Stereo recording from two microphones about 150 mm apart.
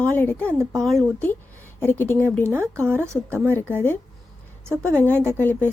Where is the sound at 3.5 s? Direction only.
15° left (ahead or behind).